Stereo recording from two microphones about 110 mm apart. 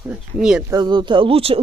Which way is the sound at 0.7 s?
40° right (ahead or behind).